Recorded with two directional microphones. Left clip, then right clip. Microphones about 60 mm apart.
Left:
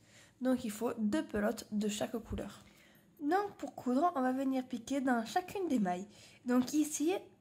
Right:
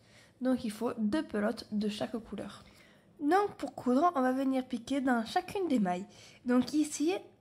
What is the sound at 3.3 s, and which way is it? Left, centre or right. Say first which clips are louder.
Speech: right 5 dB; right.